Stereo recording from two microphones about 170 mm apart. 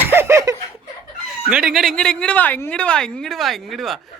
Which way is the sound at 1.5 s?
5° right (ahead or behind).